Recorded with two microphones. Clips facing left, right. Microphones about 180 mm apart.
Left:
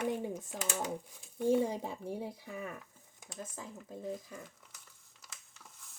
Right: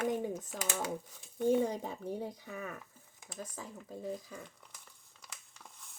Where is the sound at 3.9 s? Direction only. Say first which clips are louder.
Even; 10° left (ahead or behind).